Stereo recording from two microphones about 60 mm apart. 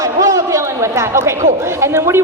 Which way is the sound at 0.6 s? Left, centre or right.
Right.